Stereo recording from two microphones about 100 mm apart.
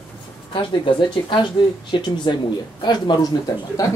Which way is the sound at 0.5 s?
55° left (ahead or behind).